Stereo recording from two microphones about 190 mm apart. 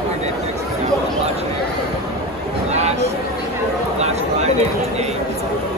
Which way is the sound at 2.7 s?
35° right (ahead or behind).